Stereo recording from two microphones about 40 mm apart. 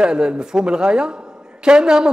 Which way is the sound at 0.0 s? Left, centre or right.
Right.